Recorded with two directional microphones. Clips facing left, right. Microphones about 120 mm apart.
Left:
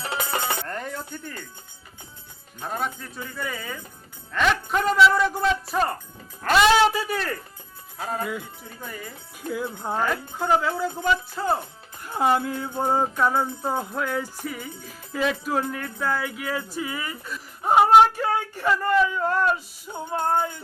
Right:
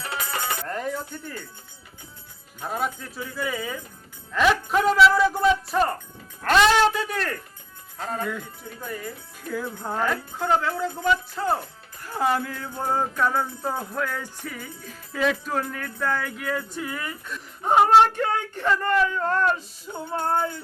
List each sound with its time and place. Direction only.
0.0 s music: 25° left (ahead or behind)
0.6 s a sound: centre (ahead or behind)
2.6 s speech: 5° right (ahead or behind)
9.5 s speech: 15° left (ahead or behind)
10.0 s speech: centre (ahead or behind)
11.6 s music: 20° left (ahead or behind)
14.1 s speech: 5° left (ahead or behind)